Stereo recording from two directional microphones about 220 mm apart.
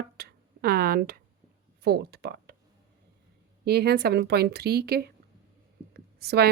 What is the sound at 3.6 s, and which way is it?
A woman's voice, 45° right (ahead or behind).